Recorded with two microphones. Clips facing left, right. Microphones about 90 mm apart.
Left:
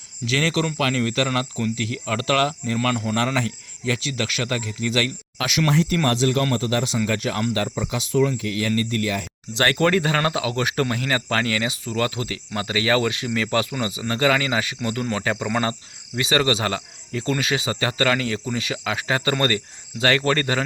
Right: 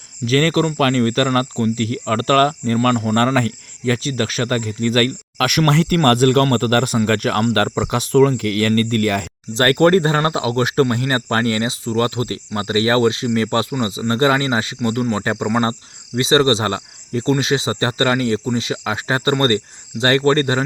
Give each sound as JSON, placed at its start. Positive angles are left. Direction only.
{"t": 0.3, "sound": "speech", "side_deg": -45}
{"t": 2.7, "sound": "speech", "side_deg": -35}
{"t": 3.2, "sound": "speech", "side_deg": -50}
{"t": 9.6, "sound": "speech", "side_deg": -40}